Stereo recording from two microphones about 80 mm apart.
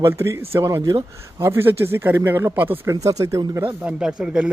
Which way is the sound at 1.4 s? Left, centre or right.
Right.